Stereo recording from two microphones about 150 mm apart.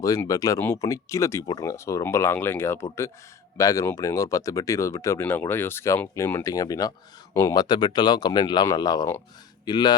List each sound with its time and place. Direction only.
0.0 s speech: 20° left (ahead or behind)